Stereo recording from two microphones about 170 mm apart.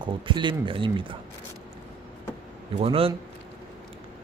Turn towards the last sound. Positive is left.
turn(degrees=-35)  # may be behind; listen again after turning